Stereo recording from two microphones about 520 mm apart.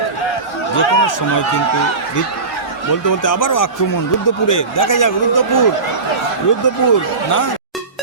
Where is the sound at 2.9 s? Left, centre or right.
Left.